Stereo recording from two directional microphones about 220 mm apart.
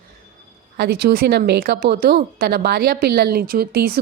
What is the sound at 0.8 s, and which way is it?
A woman's voice, 45° right (ahead or behind).